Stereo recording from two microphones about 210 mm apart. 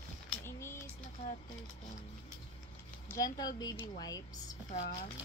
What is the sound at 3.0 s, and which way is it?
Speech, 15° left (ahead or behind).